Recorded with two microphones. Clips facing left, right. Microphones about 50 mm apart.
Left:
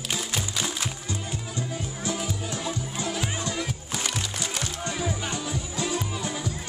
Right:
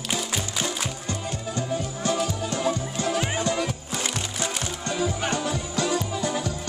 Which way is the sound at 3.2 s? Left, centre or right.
Right.